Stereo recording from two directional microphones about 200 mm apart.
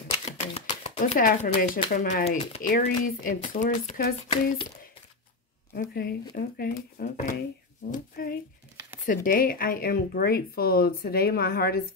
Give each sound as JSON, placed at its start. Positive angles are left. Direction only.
{"t": 0.2, "sound": "a sound", "side_deg": 35}
{"t": 2.6, "sound": "speech", "side_deg": 45}
{"t": 5.8, "sound": "speech", "side_deg": 45}